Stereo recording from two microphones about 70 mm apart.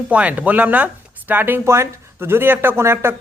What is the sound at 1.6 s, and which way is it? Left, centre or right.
Speech, right.